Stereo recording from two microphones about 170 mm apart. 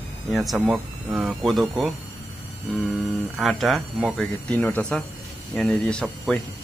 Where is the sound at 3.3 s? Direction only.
Centre (ahead or behind).